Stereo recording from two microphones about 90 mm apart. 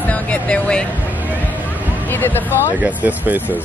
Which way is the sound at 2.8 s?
20° right (ahead or behind).